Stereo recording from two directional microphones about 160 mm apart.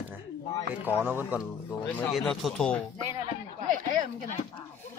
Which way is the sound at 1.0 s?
10° right (ahead or behind).